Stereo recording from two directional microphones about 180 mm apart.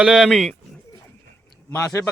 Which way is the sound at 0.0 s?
Centre (ahead or behind).